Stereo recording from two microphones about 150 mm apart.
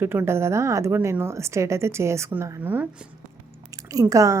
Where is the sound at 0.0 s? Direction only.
15° right (ahead or behind).